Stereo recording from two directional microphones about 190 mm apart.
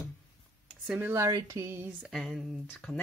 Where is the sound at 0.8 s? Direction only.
10° right (ahead or behind).